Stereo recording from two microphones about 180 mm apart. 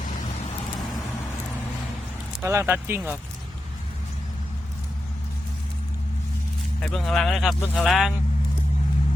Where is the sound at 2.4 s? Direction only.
15° right (ahead or behind).